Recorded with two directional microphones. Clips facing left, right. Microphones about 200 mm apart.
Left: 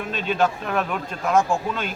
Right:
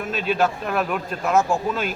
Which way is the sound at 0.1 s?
5° right (ahead or behind).